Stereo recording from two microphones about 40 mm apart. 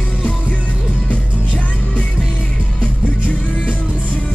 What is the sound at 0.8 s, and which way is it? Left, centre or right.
Music, right.